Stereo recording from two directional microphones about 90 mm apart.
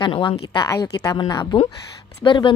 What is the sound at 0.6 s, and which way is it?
Speech, 35° left (ahead or behind).